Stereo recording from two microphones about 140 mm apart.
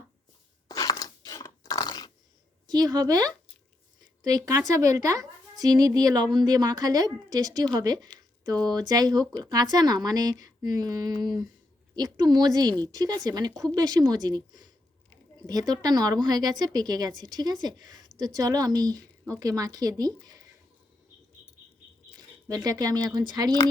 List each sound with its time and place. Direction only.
0.7 s a sound: 25° left (ahead or behind)
2.6 s a woman's voice: 30° right (ahead or behind)
11.9 s a woman's voice: 30° right (ahead or behind)
22.4 s a woman's voice: 25° right (ahead or behind)